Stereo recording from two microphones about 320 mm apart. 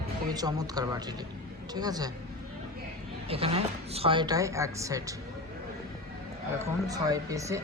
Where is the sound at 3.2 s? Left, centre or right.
Centre.